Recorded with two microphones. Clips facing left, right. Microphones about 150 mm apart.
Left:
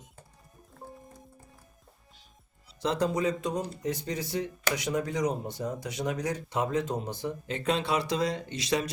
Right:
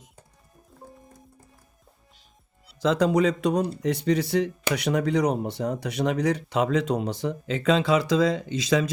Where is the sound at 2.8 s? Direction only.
90° right.